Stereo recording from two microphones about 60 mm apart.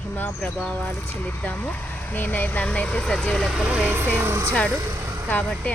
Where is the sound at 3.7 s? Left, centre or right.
Right.